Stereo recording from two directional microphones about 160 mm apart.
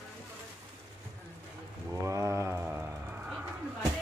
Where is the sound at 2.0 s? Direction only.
20° right (ahead or behind).